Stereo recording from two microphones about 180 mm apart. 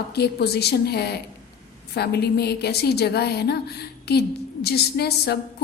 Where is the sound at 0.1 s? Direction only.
65° left (ahead or behind).